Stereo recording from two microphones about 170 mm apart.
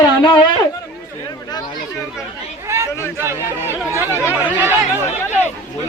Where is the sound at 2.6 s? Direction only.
15° right (ahead or behind).